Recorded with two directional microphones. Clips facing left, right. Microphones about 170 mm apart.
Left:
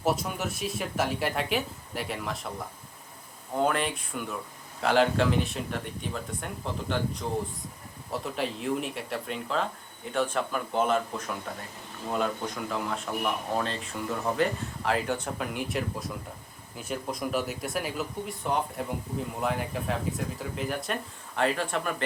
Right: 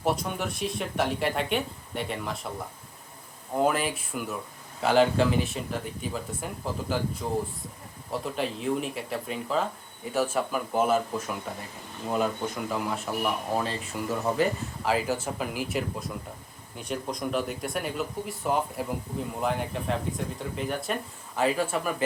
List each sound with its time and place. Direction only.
0.0 s speech: 5° left (ahead or behind)
3.5 s speech: 5° right (ahead or behind)